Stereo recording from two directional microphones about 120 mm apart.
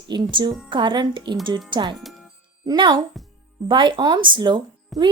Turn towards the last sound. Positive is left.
turn(degrees=0)  # may be behind; listen again after turning